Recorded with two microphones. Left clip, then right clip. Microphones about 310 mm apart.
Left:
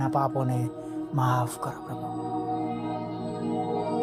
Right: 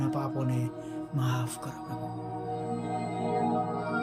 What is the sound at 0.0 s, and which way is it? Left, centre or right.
Speech, centre.